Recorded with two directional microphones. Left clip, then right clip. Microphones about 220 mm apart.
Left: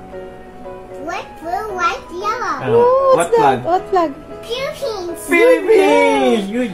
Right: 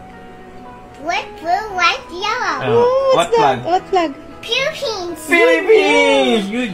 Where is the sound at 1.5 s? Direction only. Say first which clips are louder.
Right 3 dB; 20° left (ahead or behind).